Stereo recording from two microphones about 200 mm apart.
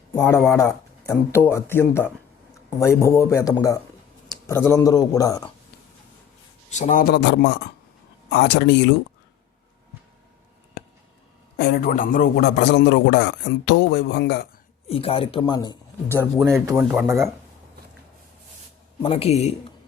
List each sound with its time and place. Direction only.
0.2 s a man's voice: 10° left (ahead or behind)
6.7 s a man's voice: 35° left (ahead or behind); by 9.0 s 60° left (ahead or behind)
11.5 s a man's voice: 55° left (ahead or behind)
14.8 s speech: 30° left (ahead or behind)
16.1 s speech: 15° right (ahead or behind)
19.0 s a man's voice: 30° left (ahead or behind)